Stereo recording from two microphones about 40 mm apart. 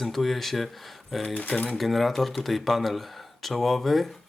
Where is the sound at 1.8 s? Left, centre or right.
Centre.